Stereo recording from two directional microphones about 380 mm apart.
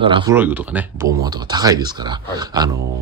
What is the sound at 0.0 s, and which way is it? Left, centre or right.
Speech, centre.